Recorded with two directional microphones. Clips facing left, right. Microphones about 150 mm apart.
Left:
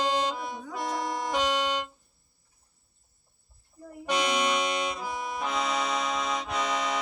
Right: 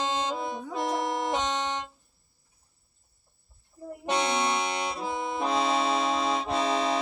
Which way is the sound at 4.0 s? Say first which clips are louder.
Even; 30° right (ahead or behind).